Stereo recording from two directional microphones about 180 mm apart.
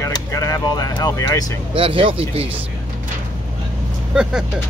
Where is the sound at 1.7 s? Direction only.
30° right (ahead or behind).